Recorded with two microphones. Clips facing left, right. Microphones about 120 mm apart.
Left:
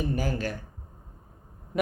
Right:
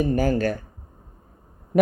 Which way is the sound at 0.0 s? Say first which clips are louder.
Right 8 dB; 50° right (ahead or behind).